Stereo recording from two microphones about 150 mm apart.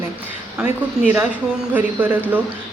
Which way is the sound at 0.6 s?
15° right (ahead or behind).